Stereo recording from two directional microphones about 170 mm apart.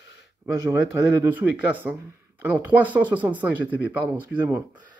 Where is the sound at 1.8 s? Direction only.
5° right (ahead or behind).